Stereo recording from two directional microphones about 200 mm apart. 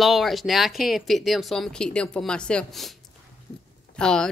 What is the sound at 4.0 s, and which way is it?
Speech, 5° left (ahead or behind).